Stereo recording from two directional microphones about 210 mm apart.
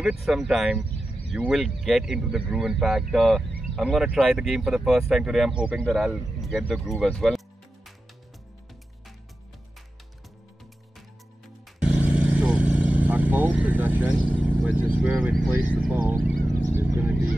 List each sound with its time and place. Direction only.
0.0 s speech: centre (ahead or behind)
11.8 s vehicle: 5° right (ahead or behind)
16.7 s a sound: 10° right (ahead or behind)